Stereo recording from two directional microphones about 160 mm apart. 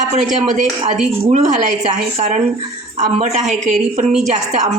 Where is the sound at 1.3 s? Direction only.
50° right (ahead or behind).